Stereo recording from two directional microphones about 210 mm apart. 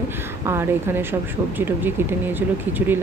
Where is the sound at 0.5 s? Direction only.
10° right (ahead or behind).